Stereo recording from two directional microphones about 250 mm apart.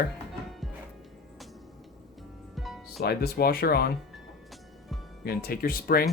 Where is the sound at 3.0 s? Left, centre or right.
Left.